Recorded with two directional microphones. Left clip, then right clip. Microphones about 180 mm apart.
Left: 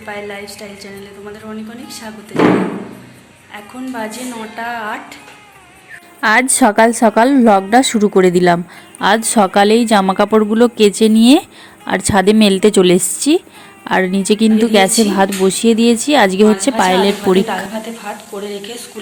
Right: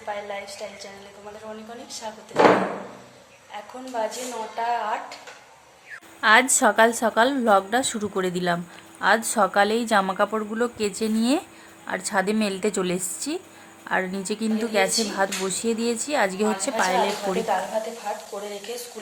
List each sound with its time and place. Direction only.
0.1 s a woman's voice: centre (ahead or behind)
3.5 s a woman's voice: centre (ahead or behind)
6.1 s a woman's voice: 30° left (ahead or behind)
18.1 s a woman's voice: centre (ahead or behind)